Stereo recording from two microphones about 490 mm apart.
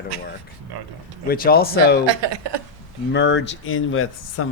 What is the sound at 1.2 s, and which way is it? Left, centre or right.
Speech, centre.